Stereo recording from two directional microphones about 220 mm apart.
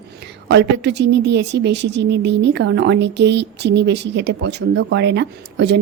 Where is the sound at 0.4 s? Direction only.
50° right (ahead or behind).